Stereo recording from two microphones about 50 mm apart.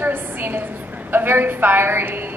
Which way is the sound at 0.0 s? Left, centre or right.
Right.